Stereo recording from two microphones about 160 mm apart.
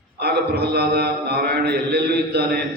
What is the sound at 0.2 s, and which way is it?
A man's voice, 80° right.